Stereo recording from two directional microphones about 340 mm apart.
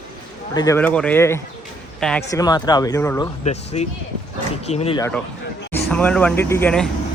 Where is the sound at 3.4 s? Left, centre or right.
Centre.